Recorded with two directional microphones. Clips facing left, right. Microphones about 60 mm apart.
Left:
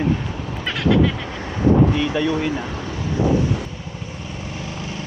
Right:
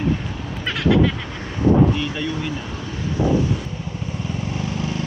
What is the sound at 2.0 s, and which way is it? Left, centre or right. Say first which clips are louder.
Speech: left 5 dB; left.